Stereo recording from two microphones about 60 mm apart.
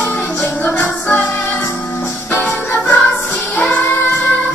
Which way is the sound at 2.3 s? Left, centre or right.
Left.